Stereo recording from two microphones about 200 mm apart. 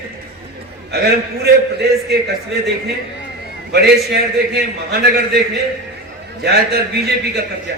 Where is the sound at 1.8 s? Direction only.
55° right (ahead or behind).